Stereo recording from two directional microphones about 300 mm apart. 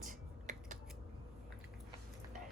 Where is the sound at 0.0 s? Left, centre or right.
Right.